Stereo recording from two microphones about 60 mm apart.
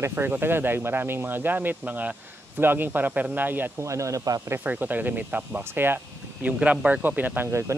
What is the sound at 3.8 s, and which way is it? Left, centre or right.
Speech, right.